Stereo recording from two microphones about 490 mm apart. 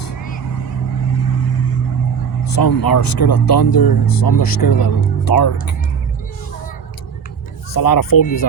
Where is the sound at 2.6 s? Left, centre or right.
Left.